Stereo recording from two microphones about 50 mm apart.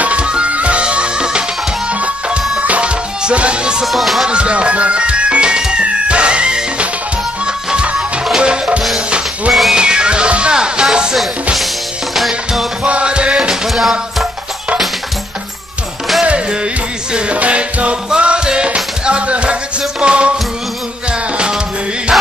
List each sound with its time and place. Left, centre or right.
0.0 s music: right
3.8 s music: centre
4.3 s music: right
9.5 s music: centre
9.8 s music: centre
12.8 s music: right
13.7 s music: centre
16.3 s music: right
22.1 s music: centre